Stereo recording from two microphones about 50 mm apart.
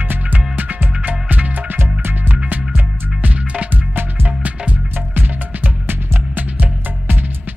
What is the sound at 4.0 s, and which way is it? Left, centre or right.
Music, right.